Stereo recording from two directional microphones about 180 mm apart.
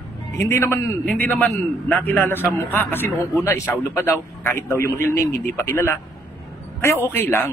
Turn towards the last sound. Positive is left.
turn(degrees=10)  # may be behind; listen again after turning